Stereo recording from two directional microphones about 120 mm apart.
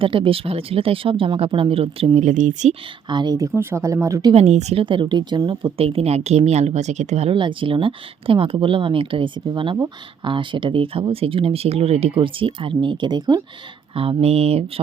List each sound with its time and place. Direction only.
0.0 s speech: 45° right (ahead or behind)
2.1 s speech: 90° right
3.1 s speech: 40° right (ahead or behind)
3.5 s speech: 20° right (ahead or behind)
4.4 s speech: 70° right (ahead or behind)
4.8 s speech: 45° right (ahead or behind); by 7.3 s 75° right (ahead or behind)
7.3 s speech: 45° right (ahead or behind)
13.9 s speech: 50° right (ahead or behind)